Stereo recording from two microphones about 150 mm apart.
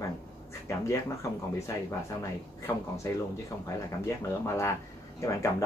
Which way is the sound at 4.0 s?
20° left (ahead or behind).